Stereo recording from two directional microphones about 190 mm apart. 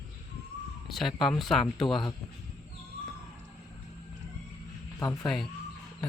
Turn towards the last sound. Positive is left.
turn(degrees=20)  # may be behind; listen again after turning